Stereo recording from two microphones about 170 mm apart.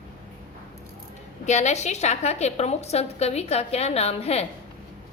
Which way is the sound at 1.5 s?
40° left (ahead or behind).